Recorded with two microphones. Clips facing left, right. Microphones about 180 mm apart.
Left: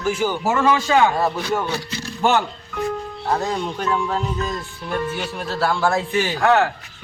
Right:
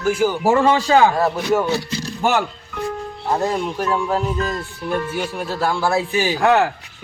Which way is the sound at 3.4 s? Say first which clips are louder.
Right 3 dB; 10° right (ahead or behind).